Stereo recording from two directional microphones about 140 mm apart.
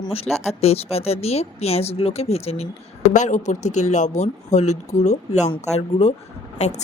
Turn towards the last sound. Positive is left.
turn(degrees=60)  # may be behind; listen again after turning